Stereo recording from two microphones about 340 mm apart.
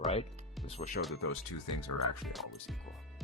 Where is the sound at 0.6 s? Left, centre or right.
Centre.